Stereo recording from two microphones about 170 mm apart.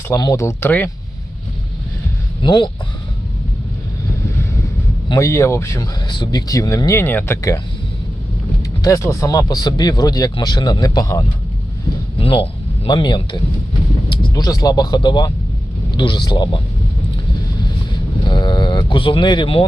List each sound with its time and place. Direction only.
0.1 s speech: 20° left (ahead or behind)
2.4 s speech: 30° left (ahead or behind)
5.0 s speech: 20° left (ahead or behind)
8.8 s speech: 20° left (ahead or behind)
12.2 s a man's voice: 35° left (ahead or behind)
18.3 s speech: 25° left (ahead or behind)